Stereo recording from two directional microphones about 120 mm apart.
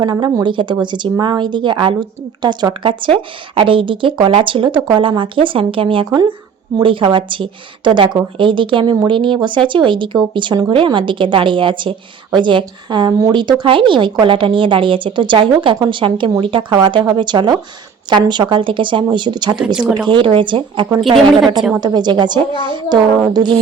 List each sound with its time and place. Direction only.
0.0 s a woman's voice: 35° right (ahead or behind)
19.5 s speech: 10° right (ahead or behind)
20.1 s a woman's voice: 45° right (ahead or behind)